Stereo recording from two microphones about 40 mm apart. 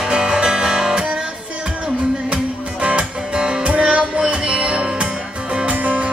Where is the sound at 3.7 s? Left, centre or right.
Right.